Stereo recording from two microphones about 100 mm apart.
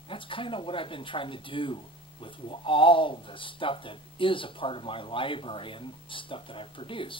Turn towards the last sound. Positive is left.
turn(degrees=60)  # may be behind; listen again after turning